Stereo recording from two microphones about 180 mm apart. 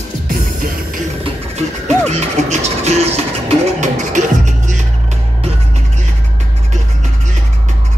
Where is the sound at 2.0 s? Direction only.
40° right (ahead or behind).